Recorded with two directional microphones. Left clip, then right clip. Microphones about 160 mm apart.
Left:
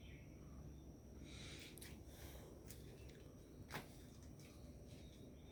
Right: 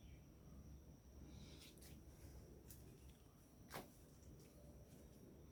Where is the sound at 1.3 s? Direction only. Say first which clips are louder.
Left 9 dB; 5° right (ahead or behind).